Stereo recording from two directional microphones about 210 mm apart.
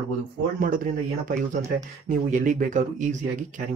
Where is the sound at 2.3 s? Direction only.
40° right (ahead or behind).